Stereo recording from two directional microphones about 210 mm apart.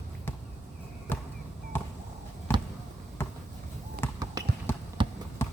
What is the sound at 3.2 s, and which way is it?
Basketball bounce, 10° left (ahead or behind).